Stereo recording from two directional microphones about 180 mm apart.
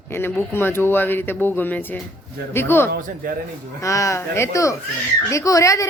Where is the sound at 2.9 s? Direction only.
50° right (ahead or behind).